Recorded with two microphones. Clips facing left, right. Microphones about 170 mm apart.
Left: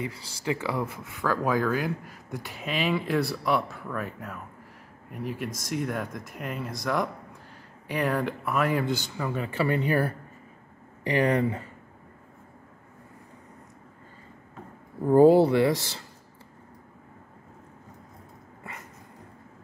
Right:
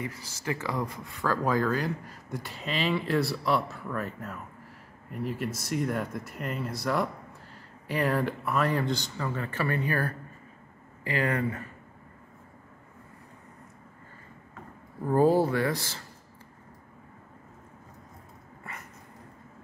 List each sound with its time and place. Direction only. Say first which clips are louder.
0.0 s speech: left 3 dB; 10° left (ahead or behind)
15.5 s speech: left 5 dB; 20° left (ahead or behind)